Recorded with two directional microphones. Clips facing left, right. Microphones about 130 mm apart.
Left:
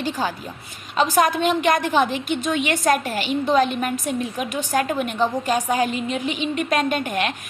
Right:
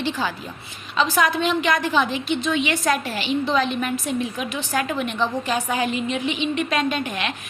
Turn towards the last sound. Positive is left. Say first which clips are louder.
# left 3 dB
turn(degrees=45)  # may be behind; listen again after turning